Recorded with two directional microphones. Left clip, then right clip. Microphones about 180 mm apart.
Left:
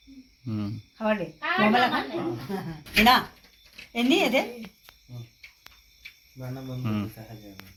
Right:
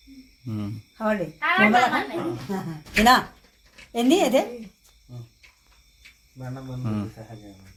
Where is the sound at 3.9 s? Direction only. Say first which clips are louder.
Right 3 dB; 70° right (ahead or behind).